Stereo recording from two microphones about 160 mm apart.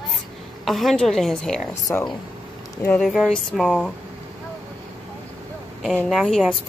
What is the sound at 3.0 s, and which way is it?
Speech, centre (ahead or behind).